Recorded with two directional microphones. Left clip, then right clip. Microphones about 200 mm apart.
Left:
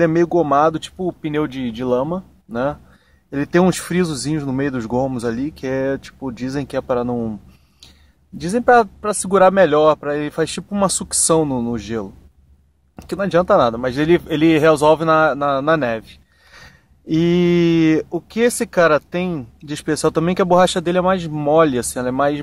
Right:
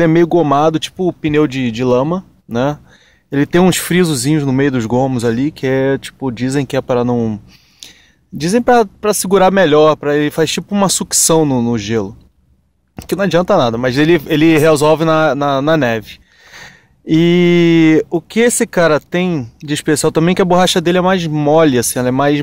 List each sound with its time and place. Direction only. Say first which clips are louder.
0.0 s speech: right 4 dB; 35° right (ahead or behind)
7.8 s a sound: right 10 dB; 35° right (ahead or behind)
8.4 s speech: right 2 dB; 35° right (ahead or behind)